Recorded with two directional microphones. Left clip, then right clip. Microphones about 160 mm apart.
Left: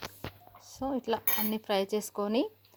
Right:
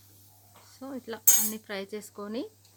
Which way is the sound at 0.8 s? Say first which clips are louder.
Left 8 dB; 25° left (ahead or behind).